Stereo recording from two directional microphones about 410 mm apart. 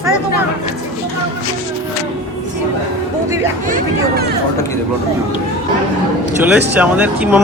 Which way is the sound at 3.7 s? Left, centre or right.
Centre.